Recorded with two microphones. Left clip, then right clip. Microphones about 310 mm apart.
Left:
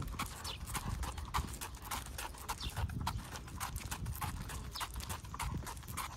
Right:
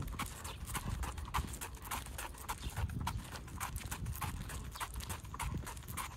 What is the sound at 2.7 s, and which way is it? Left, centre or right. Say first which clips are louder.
Clip-clop: left 1 dB; centre.